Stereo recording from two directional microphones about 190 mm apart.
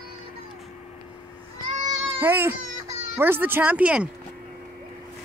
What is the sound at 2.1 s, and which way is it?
Speech, 10° right (ahead or behind).